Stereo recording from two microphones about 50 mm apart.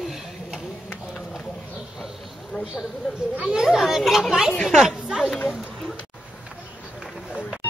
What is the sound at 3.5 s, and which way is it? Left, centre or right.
Chatter, centre.